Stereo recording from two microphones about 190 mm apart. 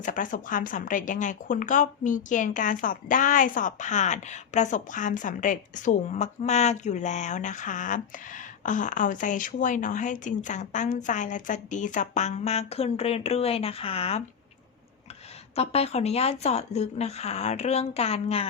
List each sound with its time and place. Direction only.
0.0 s speech: 45° left (ahead or behind)
15.5 s speech: 30° left (ahead or behind)